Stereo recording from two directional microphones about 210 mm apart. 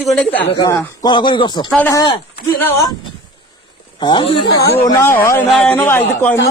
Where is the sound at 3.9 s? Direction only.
20° left (ahead or behind).